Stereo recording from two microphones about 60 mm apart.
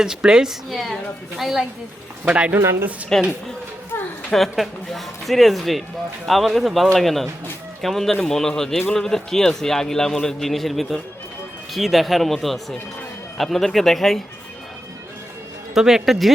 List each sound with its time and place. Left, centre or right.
0.0 s a woman's voice: centre
0.7 s speech: centre
2.2 s speech: right
3.1 s a man's voice: centre
3.9 s a sound: left
4.3 s a man's voice: centre
15.7 s speech: centre